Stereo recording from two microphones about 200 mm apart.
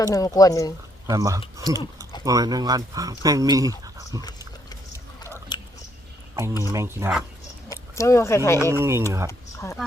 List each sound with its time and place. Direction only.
0.0 s speech: 15° left (ahead or behind)
1.0 s speech: 15° right (ahead or behind)
4.2 s dog: 20° left (ahead or behind)
5.5 s chewing: 20° left (ahead or behind)
6.6 s speech: 15° right (ahead or behind)
7.7 s speech: 15° left (ahead or behind)
8.8 s speech: 10° right (ahead or behind)